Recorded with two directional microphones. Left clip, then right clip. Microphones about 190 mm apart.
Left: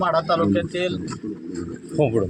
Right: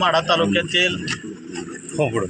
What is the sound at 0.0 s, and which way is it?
Speech, 10° left (ahead or behind).